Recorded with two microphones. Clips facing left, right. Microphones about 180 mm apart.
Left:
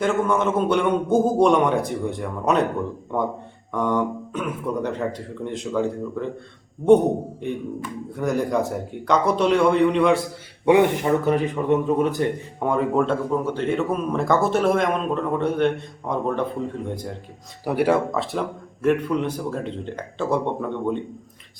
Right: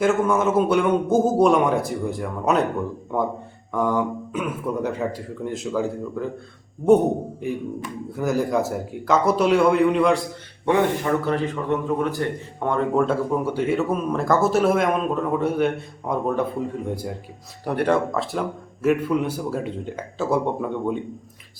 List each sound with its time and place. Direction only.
0.0 s a man's voice: 5° right (ahead or behind)
8.1 s a man's voice: 5° right (ahead or behind)
10.7 s a man's voice: 15° left (ahead or behind)
12.6 s a man's voice: 5° left (ahead or behind)
13.3 s a man's voice: 10° right (ahead or behind)
17.7 s a man's voice: 5° left (ahead or behind)